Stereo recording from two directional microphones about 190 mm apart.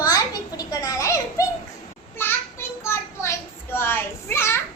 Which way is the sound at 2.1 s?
15° left (ahead or behind).